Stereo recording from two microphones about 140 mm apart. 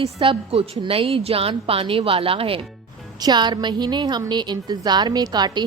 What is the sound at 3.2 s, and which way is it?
A woman's voice, 30° right (ahead or behind).